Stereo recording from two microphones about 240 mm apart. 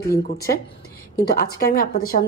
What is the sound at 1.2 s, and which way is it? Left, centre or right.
A woman's voice, left.